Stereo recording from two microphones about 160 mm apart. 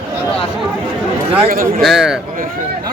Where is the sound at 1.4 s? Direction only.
60° right (ahead or behind).